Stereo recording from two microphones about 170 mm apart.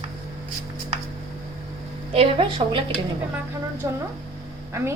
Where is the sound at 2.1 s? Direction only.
35° right (ahead or behind).